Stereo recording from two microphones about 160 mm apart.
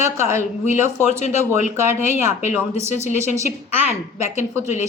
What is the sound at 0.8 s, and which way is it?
Speech, 45° left (ahead or behind).